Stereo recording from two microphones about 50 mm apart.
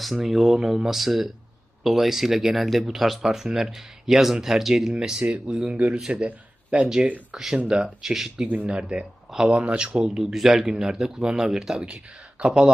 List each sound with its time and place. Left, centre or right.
0.0 s speech: centre
5.2 s speech: right
6.2 s a sound: right
7.3 s speech: centre
8.6 s speech: right